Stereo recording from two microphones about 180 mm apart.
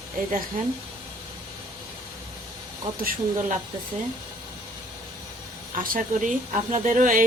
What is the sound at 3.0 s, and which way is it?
Speech, 50° right (ahead or behind).